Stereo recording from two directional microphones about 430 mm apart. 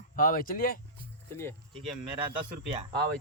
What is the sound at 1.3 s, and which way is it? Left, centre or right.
Speech, centre.